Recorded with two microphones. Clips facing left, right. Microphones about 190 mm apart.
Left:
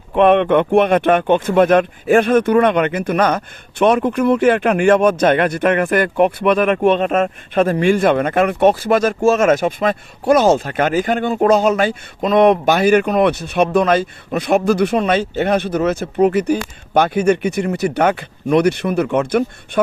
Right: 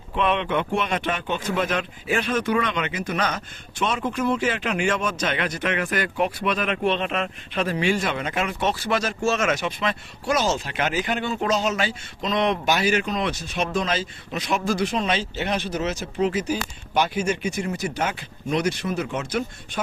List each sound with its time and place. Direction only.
0.1 s speech: 55° left (ahead or behind)